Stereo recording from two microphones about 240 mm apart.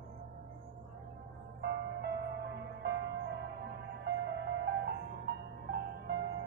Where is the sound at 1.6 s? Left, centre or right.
Right.